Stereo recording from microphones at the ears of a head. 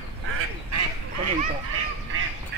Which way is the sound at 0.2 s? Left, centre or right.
Right.